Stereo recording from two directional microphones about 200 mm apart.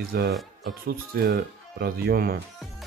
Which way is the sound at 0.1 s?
55° right (ahead or behind).